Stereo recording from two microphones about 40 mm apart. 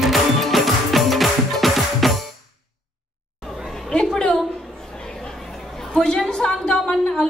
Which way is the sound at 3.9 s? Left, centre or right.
Left.